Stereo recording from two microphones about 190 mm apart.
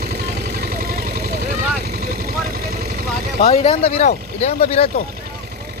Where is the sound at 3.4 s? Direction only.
35° left (ahead or behind).